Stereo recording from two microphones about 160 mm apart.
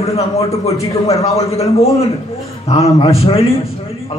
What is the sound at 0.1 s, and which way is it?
A man's voice, 40° left (ahead or behind).